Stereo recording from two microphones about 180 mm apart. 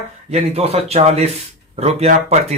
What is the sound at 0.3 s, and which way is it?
Speech, 35° right (ahead or behind).